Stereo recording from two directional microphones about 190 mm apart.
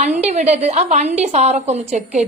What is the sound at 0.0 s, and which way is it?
A woman's voice, 40° right (ahead or behind).